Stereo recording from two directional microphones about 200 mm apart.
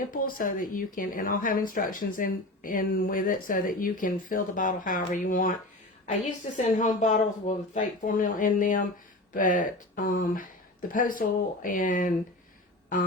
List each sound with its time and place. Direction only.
0.1 s speech: 45° left (ahead or behind)
6.6 s speech: 40° left (ahead or behind)